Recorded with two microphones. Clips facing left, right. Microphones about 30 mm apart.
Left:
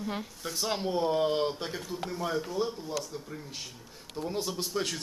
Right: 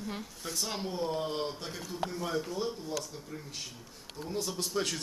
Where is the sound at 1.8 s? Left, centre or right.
Centre.